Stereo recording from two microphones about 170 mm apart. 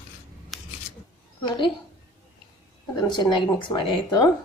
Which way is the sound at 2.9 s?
25° left (ahead or behind).